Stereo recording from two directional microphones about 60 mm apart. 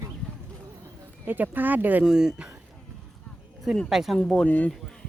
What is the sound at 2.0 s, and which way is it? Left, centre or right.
Speech, centre.